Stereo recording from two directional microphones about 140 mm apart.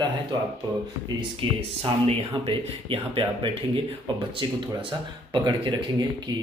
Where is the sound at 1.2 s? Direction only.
40° right (ahead or behind).